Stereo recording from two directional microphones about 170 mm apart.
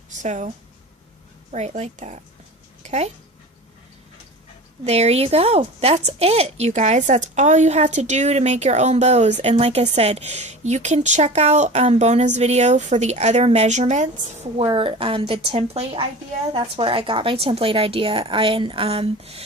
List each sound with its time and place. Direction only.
0.2 s a woman's voice: 45° right (ahead or behind)
4.9 s a woman's voice: 40° right (ahead or behind)
14.6 s a woman's voice: 30° right (ahead or behind)